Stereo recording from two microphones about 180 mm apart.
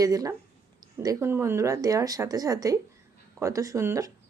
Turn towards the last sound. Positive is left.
turn(degrees=-15)  # may be behind; listen again after turning